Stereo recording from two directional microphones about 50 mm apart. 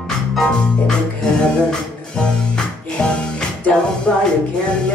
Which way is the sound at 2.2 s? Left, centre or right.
Centre.